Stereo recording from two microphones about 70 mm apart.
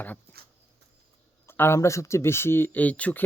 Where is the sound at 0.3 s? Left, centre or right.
Left.